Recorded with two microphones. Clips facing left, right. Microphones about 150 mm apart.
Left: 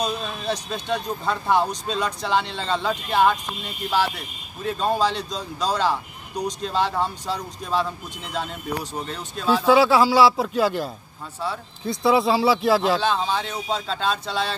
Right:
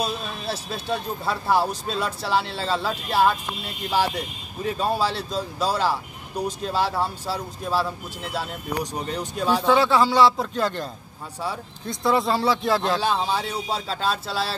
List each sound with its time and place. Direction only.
0.0 s speech: 5° right (ahead or behind)
4.6 s speech: 10° right (ahead or behind)
9.5 s speech: 5° left (ahead or behind)
13.0 s speech: 10° right (ahead or behind)